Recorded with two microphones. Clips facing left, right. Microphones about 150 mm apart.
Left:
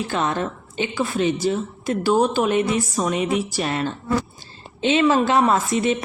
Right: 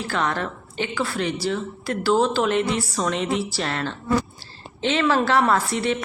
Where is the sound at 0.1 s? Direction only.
20° left (ahead or behind).